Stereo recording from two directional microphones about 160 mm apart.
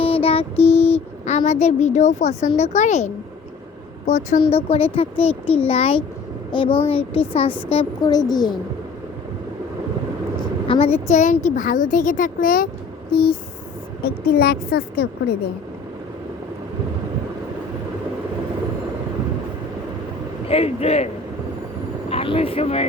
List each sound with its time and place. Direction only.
0.0 s a sound: 35° left (ahead or behind)
2.6 s a woman's voice: 45° left (ahead or behind); by 8.5 s 25° left (ahead or behind)
10.7 s a woman's voice: 40° left (ahead or behind); by 12.6 s 60° left (ahead or behind)
13.1 s a woman's voice: 75° left (ahead or behind)
20.5 s a child's voice: 40° left (ahead or behind)
22.1 s speech: 35° left (ahead or behind)